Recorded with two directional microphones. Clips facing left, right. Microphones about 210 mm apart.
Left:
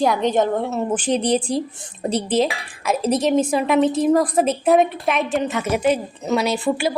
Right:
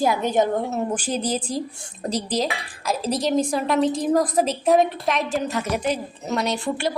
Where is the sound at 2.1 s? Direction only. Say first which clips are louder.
Left 5 dB; 35° right (ahead or behind).